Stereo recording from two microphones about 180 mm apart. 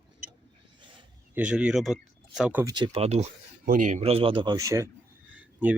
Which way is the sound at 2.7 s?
30° right (ahead or behind).